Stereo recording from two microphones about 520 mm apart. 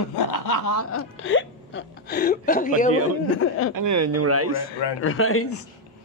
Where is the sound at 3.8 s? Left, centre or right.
Right.